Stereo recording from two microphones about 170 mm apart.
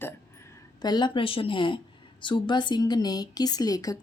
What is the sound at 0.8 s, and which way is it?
A woman's voice, 25° left (ahead or behind).